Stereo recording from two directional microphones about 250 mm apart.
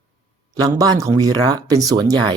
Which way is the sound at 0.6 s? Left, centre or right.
Centre.